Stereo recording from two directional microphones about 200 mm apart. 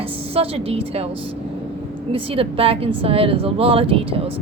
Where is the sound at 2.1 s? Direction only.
30° right (ahead or behind).